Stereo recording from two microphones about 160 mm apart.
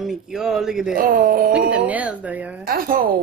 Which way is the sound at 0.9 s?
60° right (ahead or behind).